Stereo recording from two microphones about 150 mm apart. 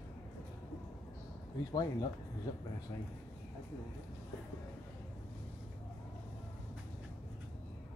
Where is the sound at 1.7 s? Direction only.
30° left (ahead or behind).